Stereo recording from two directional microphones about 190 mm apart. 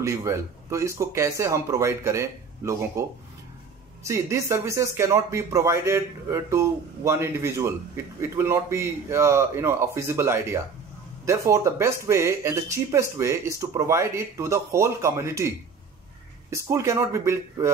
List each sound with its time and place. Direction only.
0.0 s speech: 15° right (ahead or behind)